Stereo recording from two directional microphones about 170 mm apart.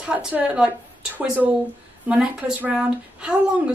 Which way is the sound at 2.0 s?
5° right (ahead or behind).